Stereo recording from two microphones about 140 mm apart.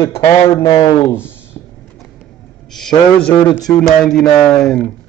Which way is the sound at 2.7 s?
5° left (ahead or behind).